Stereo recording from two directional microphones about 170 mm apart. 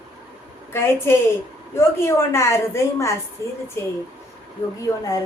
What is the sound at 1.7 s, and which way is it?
A woman's voice, 15° left (ahead or behind).